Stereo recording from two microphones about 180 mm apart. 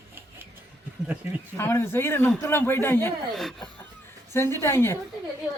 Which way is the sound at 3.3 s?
Centre (ahead or behind).